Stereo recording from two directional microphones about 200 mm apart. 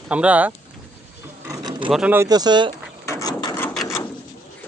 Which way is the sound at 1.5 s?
20° right (ahead or behind).